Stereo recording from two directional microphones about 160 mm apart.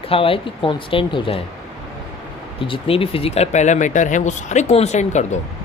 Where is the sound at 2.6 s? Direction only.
35° left (ahead or behind).